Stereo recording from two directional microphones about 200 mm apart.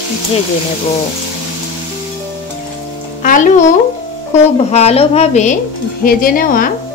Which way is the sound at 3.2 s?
40° left (ahead or behind).